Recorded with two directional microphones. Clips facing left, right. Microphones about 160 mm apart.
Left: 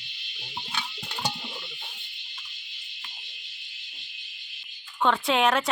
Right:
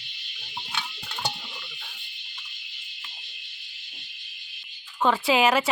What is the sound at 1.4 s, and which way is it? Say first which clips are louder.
Music: left 3 dB; 20° left (ahead or behind).